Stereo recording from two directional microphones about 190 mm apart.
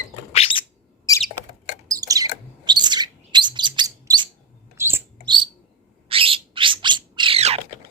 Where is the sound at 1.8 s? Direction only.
20° right (ahead or behind).